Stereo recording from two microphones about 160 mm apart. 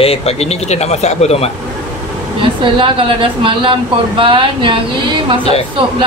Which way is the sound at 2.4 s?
35° right (ahead or behind).